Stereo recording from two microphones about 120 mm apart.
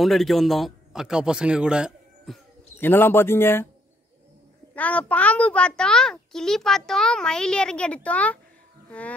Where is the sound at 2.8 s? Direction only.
15° left (ahead or behind).